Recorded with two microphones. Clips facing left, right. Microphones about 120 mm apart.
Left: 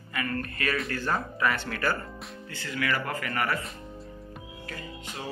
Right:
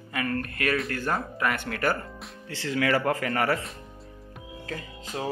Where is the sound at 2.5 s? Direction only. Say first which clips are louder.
Right 6 dB; 90° right.